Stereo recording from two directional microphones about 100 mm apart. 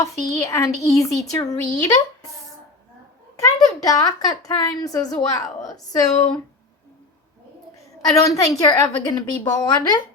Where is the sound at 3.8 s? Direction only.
40° left (ahead or behind).